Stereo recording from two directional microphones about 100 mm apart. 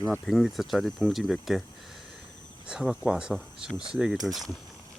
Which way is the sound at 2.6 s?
10° right (ahead or behind).